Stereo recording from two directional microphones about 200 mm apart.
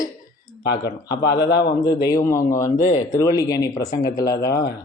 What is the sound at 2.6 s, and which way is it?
Speech, 35° left (ahead or behind).